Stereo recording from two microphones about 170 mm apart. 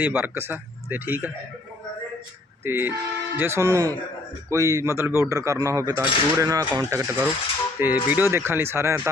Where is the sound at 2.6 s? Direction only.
15° right (ahead or behind).